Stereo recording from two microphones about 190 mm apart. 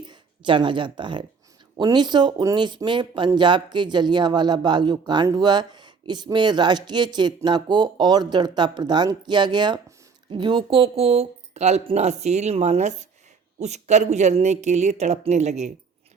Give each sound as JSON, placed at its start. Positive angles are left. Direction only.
{"t": 0.1, "sound": "speech", "side_deg": -25}